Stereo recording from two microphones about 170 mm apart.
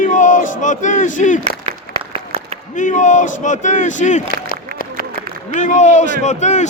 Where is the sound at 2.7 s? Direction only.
45° left (ahead or behind).